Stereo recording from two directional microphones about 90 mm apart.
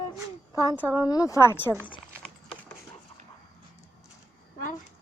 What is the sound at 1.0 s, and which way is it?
Speech, 40° left (ahead or behind).